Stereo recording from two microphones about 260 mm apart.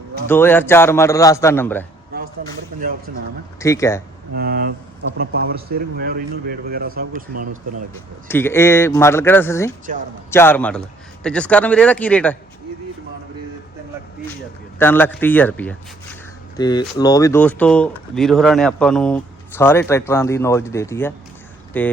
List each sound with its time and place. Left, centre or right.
0.3 s speech: centre
3.6 s speech: centre
4.4 s speech: right
8.3 s a man's voice: centre
14.8 s speech: centre